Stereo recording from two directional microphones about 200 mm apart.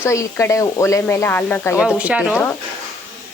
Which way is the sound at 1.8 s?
5° right (ahead or behind).